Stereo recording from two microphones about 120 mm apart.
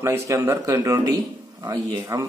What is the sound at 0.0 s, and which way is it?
A man's voice, 20° right (ahead or behind).